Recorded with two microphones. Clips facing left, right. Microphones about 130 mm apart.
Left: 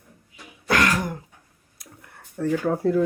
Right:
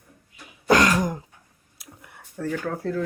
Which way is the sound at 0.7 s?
20° right (ahead or behind).